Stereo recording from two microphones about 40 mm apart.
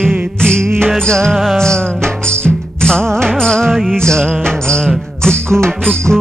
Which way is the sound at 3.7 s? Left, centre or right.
Centre.